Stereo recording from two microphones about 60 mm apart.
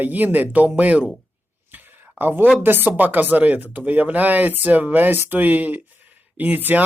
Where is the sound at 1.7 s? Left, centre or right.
Right.